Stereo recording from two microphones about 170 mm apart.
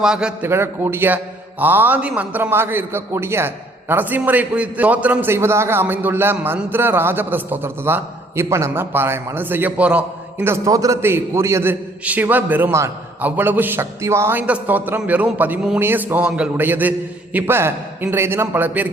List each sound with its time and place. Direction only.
0.0 s a man's voice: 5° right (ahead or behind)